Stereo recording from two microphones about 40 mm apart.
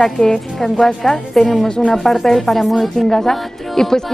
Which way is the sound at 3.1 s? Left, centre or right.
Centre.